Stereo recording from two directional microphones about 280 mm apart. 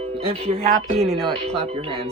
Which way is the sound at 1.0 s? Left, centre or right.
Centre.